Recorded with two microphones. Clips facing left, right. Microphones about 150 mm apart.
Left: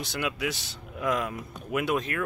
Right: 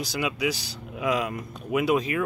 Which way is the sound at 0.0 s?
Centre (ahead or behind).